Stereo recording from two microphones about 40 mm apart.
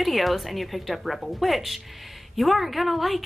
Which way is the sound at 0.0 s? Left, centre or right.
Centre.